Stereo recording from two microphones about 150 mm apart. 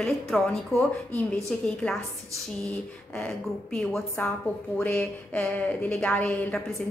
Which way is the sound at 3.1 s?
5° left (ahead or behind).